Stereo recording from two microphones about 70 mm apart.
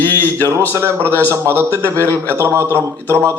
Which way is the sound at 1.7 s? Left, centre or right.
Left.